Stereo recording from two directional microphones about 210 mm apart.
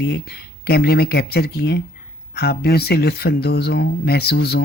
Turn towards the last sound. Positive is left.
turn(degrees=50)  # may be behind; listen again after turning